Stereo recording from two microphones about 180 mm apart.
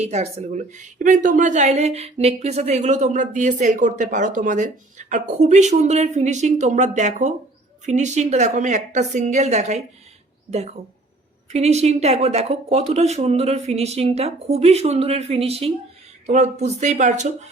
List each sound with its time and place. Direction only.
0.0 s a woman's voice: 35° right (ahead or behind)
11.5 s a woman's voice: 35° right (ahead or behind)